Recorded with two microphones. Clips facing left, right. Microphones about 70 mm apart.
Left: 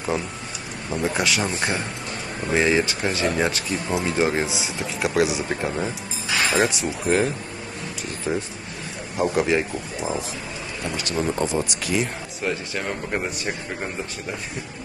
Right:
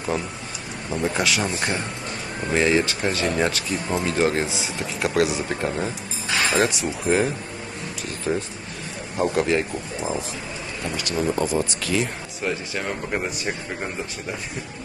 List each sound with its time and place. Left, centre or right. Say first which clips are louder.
0.8 s speech: even; centre
11.1 s speech: right 1 dB; left
11.5 s speech: right 1 dB; centre
12.0 s speech: even; centre